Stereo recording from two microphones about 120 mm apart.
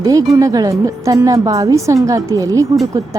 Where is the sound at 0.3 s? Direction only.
30° right (ahead or behind).